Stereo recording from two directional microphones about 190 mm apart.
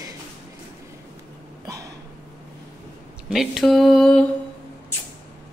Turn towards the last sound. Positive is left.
turn(degrees=0)  # may be behind; listen again after turning